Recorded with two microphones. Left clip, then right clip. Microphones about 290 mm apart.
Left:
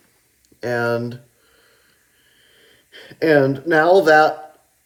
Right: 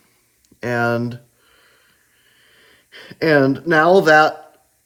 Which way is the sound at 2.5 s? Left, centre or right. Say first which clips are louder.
Right 2 dB; right.